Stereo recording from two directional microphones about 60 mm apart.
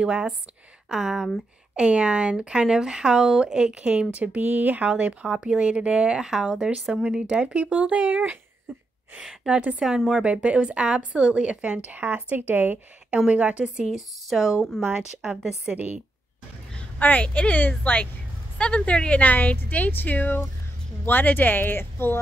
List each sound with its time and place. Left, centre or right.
0.0 s speech: centre
1.8 s speech: centre
4.8 s speech: centre
8.7 s a sound: centre
9.1 s a woman's voice: centre
9.6 s a woman's voice: centre
9.8 s speech: centre
10.2 s a woman's voice: centre
13.3 s a woman's voice: centre
13.9 s a woman's voice: centre
17.0 s speech: left